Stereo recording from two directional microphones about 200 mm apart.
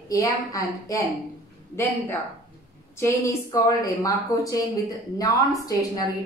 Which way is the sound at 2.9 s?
15° left (ahead or behind).